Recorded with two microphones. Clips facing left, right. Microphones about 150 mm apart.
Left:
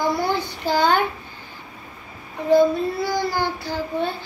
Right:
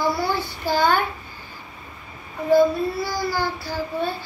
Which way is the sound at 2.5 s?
20° left (ahead or behind).